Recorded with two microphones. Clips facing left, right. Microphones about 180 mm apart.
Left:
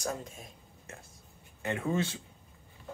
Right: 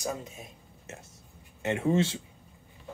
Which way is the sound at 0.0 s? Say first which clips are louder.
Right 2 dB; 5° right (ahead or behind).